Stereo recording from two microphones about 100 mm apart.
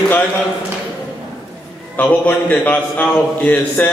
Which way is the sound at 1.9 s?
15° left (ahead or behind).